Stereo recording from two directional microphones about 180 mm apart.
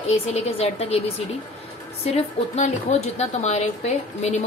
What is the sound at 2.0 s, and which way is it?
A woman's voice, 35° left (ahead or behind).